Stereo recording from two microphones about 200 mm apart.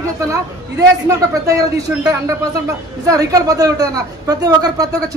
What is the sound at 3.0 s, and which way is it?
A woman's voice, 15° right (ahead or behind).